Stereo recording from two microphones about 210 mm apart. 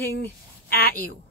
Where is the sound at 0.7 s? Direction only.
45° left (ahead or behind).